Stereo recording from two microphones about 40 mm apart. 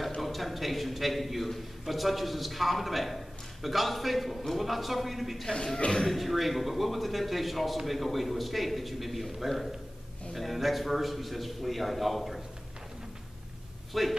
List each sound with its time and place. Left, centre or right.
0.2 s a man's voice: centre
5.8 s speech: centre
6.0 s a man's voice: centre
13.9 s a man's voice: centre